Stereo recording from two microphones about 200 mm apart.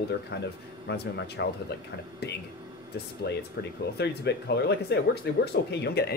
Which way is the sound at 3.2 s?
55° left (ahead or behind).